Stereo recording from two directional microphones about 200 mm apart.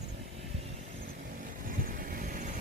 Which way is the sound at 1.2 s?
45° right (ahead or behind).